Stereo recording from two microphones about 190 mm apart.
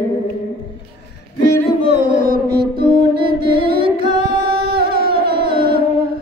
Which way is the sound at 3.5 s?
25° right (ahead or behind).